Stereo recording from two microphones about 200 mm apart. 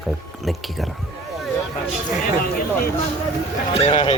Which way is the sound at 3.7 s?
30° left (ahead or behind).